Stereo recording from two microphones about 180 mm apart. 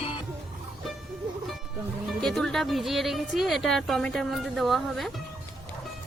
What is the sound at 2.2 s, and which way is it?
Speech, centre (ahead or behind).